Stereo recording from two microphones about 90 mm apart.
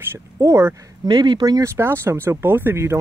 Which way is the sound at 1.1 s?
55° right (ahead or behind).